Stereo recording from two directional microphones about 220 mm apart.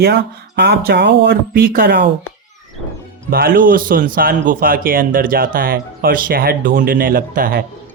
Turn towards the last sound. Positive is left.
turn(degrees=-40)  # may be behind; listen again after turning